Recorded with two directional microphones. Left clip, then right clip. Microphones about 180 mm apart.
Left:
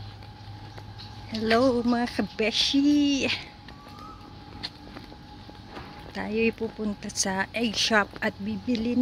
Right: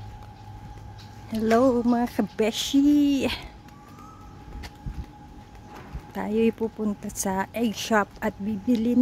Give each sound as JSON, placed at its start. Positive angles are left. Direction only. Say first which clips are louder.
{"t": 1.3, "sound": "a woman's voice", "louder": "right 2 dB", "side_deg": -15}
{"t": 1.6, "sound": "speech", "louder": "right 2 dB", "side_deg": 0}
{"t": 2.3, "sound": "speech", "louder": "even", "side_deg": -20}
{"t": 6.1, "sound": "a woman's voice", "louder": "right 2 dB", "side_deg": -15}
{"t": 6.8, "sound": "a woman's voice", "louder": "even", "side_deg": 0}
{"t": 8.6, "sound": "speech", "louder": "right 4 dB", "side_deg": -25}